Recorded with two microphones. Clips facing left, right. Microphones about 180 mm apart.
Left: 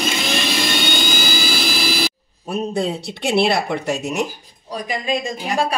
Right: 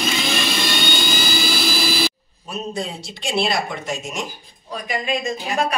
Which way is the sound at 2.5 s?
60° left (ahead or behind).